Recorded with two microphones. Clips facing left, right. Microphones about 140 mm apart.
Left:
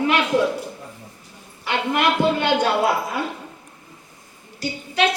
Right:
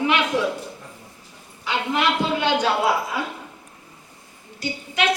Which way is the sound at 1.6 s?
60° left (ahead or behind).